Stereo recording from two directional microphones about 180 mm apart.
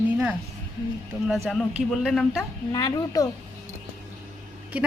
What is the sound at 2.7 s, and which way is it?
Speech, 20° left (ahead or behind).